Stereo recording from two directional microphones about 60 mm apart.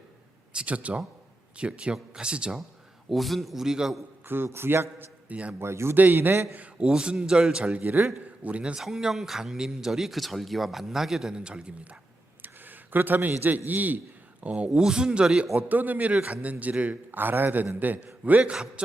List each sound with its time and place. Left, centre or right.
0.5 s a man's voice: right
3.1 s speech: centre
4.3 s a man's voice: right
5.3 s a man's voice: right
5.5 s a man's voice: right
6.0 s a man's voice: right
6.5 s a man's voice: right
6.8 s a man's voice: centre
7.8 s a man's voice: right
8.4 s a man's voice: centre
8.8 s speech: centre
12.4 s a sound: right
13.7 s a man's voice: right
15.7 s a man's voice: right